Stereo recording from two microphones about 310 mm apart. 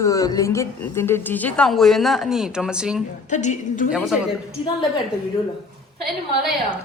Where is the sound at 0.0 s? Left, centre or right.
Centre.